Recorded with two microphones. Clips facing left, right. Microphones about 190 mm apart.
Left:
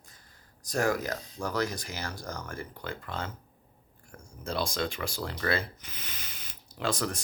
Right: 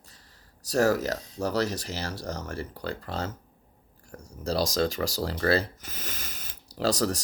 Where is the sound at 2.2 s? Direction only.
35° right (ahead or behind).